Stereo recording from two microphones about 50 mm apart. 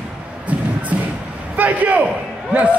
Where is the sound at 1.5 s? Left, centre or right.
Right.